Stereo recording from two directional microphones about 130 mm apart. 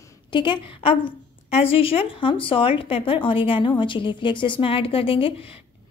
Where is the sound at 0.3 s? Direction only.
40° left (ahead or behind).